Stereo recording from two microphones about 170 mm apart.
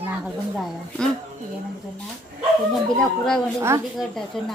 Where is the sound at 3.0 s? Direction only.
5° left (ahead or behind).